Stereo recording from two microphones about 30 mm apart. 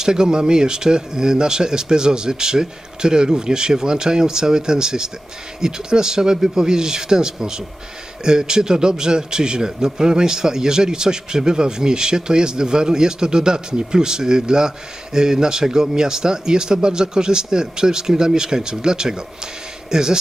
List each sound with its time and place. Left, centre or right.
0.0 s a man's voice: right